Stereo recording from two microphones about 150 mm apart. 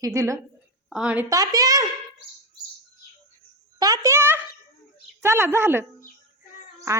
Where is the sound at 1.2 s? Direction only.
25° right (ahead or behind).